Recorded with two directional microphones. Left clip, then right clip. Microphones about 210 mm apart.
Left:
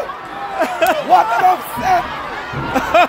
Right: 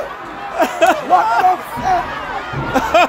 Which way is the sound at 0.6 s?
15° right (ahead or behind).